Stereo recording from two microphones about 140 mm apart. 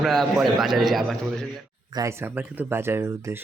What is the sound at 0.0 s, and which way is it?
A man's voice, centre (ahead or behind).